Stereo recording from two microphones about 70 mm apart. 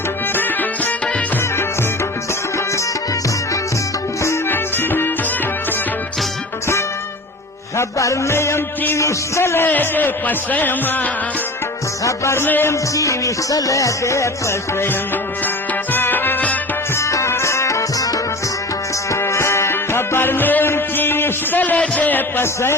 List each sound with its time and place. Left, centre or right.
0.3 s music: left
4.4 s music: left
7.8 s music: left
9.6 s a man's voice: left
12.0 s music: left
12.4 s music: left
13.0 s music: left
15.9 s music: left
16.9 s music: left
19.1 s music: left